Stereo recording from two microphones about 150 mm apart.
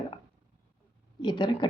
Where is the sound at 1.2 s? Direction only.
30° left (ahead or behind).